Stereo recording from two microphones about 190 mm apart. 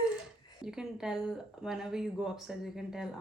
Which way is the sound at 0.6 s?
5° right (ahead or behind).